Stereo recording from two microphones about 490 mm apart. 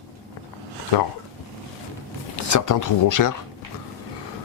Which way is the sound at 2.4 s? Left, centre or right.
Left.